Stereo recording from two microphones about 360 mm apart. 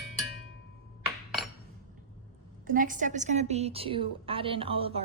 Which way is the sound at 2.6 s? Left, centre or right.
Right.